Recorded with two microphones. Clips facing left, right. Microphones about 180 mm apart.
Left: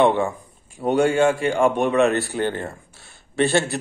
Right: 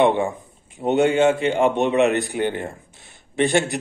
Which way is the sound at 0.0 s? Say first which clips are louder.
Even; 20° right (ahead or behind).